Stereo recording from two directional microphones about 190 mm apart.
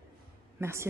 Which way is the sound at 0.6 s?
15° right (ahead or behind).